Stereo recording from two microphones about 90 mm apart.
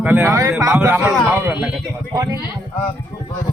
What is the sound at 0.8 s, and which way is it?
Speech, 25° right (ahead or behind).